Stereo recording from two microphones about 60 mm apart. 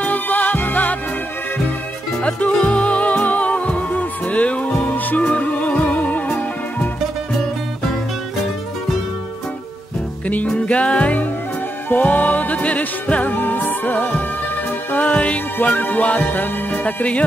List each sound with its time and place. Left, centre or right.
0.0 s music: left
2.2 s music: left
10.2 s music: left
15.5 s music: left
16.8 s music: left